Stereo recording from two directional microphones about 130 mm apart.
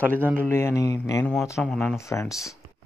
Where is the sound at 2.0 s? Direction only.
20° left (ahead or behind).